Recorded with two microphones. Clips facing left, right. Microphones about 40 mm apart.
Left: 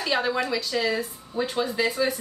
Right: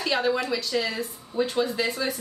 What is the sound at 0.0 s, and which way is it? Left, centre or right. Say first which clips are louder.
A woman's voice: even; centre.